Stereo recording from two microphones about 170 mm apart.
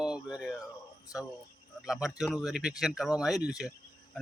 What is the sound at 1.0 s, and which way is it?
Speech, 20° left (ahead or behind).